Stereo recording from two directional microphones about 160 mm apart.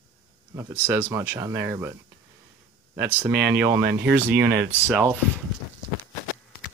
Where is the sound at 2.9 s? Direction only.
10° right (ahead or behind).